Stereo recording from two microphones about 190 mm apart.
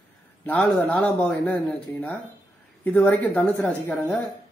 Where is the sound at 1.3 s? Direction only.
5° left (ahead or behind).